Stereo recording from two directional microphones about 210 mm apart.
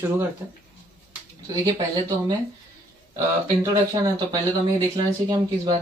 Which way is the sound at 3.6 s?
20° right (ahead or behind).